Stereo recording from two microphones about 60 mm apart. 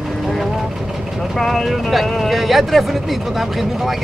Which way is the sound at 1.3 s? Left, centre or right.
Centre.